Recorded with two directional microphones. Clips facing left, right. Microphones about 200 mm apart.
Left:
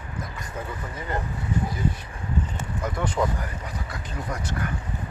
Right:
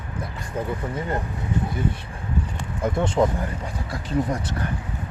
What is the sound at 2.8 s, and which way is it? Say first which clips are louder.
Speech: right 6 dB; 25° right (ahead or behind).